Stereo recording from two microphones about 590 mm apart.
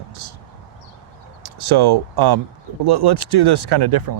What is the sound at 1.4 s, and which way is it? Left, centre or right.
Speech, right.